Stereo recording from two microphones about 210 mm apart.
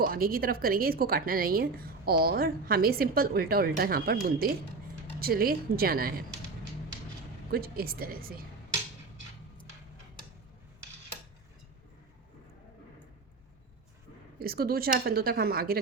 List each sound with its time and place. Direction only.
0.0 s a woman's voice: 45° right (ahead or behind)
7.5 s a woman's voice: 45° right (ahead or behind)
14.3 s a woman's voice: 45° right (ahead or behind)